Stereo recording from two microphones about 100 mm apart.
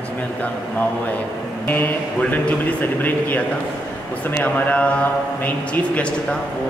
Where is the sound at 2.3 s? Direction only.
15° left (ahead or behind).